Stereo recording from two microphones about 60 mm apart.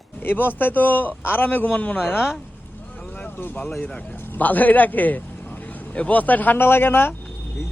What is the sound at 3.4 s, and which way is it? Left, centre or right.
A man's voice, left.